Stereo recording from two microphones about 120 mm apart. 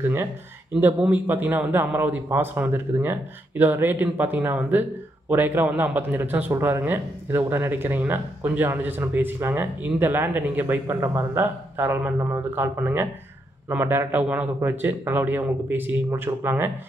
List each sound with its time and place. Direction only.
0.0 s a man's voice: 20° right (ahead or behind)